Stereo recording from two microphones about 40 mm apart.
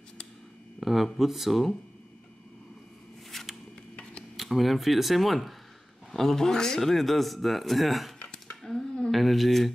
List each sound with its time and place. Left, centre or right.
0.7 s speech: centre
3.3 s a sound: centre
4.4 s speech: centre
8.6 s speech: centre
9.1 s speech: centre